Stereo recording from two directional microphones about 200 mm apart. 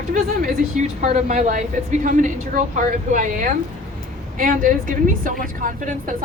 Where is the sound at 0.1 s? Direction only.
40° right (ahead or behind).